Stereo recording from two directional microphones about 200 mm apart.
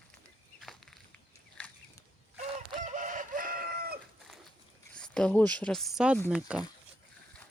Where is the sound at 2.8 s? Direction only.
40° right (ahead or behind).